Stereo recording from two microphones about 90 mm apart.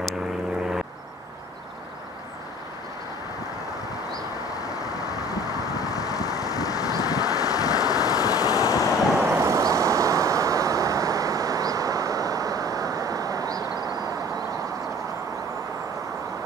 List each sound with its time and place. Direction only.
5.3 s vehicle: 45° left (ahead or behind)
9.2 s vehicle: 30° right (ahead or behind)